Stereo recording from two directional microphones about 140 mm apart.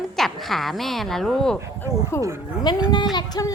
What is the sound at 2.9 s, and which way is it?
Speech, 30° left (ahead or behind).